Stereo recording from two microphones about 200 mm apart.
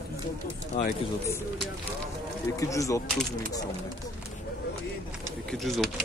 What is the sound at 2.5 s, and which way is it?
Speech, 15° left (ahead or behind).